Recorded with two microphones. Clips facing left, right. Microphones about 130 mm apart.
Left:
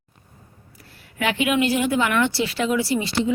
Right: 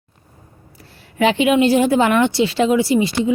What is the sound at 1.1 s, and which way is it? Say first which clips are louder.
Speech: right 7 dB; 25° right (ahead or behind).